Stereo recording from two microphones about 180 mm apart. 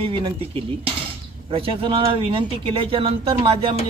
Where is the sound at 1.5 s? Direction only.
30° right (ahead or behind).